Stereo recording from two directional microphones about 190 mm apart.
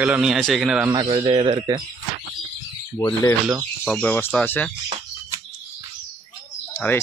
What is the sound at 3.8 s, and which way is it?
Speech, 5° left (ahead or behind).